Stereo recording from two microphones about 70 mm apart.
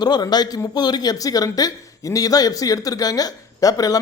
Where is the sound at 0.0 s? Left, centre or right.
Left.